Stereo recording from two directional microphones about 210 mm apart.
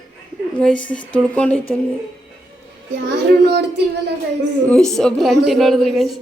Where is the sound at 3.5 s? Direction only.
50° right (ahead or behind).